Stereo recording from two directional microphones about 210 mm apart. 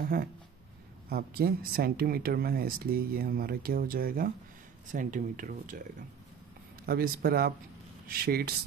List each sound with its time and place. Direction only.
0.0 s speech: 45° right (ahead or behind)
6.9 s speech: 45° right (ahead or behind)